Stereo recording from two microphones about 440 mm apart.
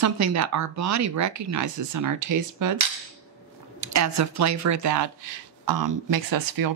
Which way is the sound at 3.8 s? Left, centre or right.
Right.